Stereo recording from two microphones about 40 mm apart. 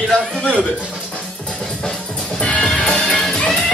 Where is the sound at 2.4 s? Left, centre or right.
Left.